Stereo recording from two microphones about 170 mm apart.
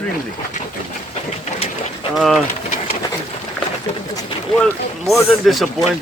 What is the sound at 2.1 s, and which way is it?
Speech, centre (ahead or behind).